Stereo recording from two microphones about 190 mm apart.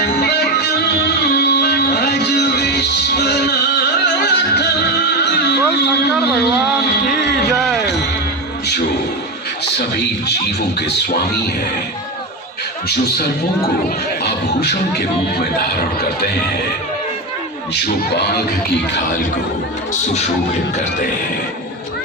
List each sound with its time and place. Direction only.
0.2 s music: 60° left (ahead or behind)
9.7 s a sound: 65° left (ahead or behind)
15.4 s speech: 55° left (ahead or behind)
17.8 s speech: 60° left (ahead or behind)